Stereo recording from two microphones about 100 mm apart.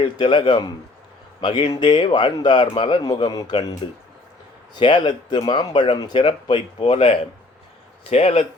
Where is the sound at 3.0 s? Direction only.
40° left (ahead or behind); by 7.2 s 70° left (ahead or behind).